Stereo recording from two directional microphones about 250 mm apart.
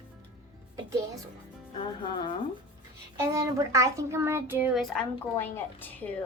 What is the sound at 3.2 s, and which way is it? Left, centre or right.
A child's voice, centre.